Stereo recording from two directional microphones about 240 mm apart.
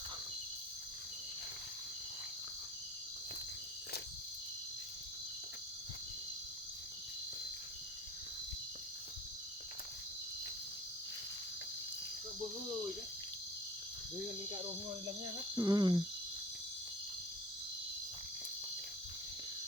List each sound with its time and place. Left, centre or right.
15.5 s speech: centre